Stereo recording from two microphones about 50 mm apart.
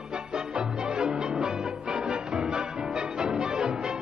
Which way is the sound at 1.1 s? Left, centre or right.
Centre.